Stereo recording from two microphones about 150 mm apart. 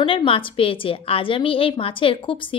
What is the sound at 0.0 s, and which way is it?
A woman's voice, 35° left (ahead or behind).